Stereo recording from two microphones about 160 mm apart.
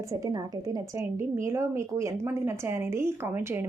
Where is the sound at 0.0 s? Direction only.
20° right (ahead or behind).